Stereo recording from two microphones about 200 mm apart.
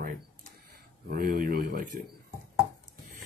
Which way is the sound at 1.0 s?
50° right (ahead or behind).